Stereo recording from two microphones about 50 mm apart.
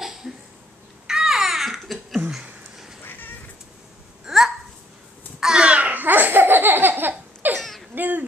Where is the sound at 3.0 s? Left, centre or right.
Left.